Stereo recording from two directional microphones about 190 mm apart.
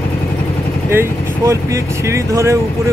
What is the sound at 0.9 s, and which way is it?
Speech, 15° right (ahead or behind).